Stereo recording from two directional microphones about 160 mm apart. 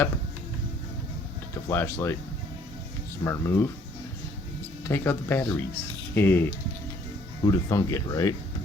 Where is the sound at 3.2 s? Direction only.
20° left (ahead or behind).